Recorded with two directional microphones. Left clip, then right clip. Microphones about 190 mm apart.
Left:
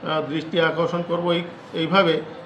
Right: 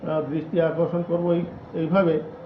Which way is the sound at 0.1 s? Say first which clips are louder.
Left 1 dB; 5° left (ahead or behind).